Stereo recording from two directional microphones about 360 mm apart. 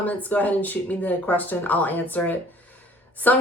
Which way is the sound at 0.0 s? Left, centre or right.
Centre.